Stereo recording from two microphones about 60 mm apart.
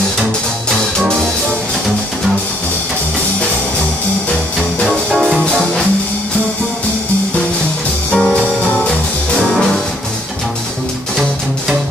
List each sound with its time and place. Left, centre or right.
4.8 s music: centre
5.4 s music: centre
8.1 s music: centre